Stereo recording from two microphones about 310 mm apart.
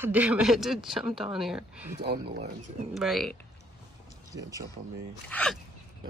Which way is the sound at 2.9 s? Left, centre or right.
Centre.